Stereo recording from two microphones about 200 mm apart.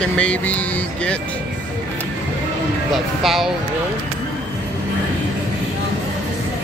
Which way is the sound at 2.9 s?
Centre (ahead or behind).